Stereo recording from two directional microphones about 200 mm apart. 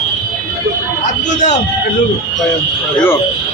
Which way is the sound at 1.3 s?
35° left (ahead or behind).